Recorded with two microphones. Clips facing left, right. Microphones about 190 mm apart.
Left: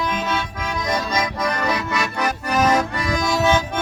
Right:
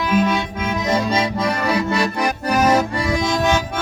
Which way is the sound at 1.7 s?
30° right (ahead or behind).